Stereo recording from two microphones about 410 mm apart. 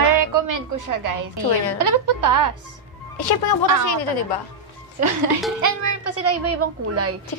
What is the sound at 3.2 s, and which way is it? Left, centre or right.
Speech, left.